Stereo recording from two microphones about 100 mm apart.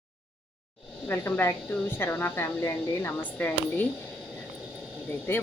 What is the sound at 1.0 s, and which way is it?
A woman's voice, 25° left (ahead or behind).